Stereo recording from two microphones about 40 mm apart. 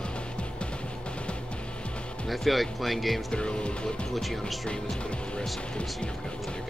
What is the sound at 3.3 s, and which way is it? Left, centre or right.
Speech, left.